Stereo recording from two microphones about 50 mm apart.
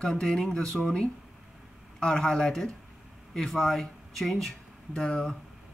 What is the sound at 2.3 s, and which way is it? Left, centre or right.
Speech, centre.